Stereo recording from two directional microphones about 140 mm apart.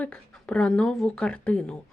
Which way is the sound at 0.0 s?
10° left (ahead or behind).